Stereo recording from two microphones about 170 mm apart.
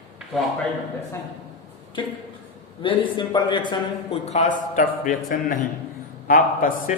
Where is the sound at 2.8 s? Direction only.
30° left (ahead or behind).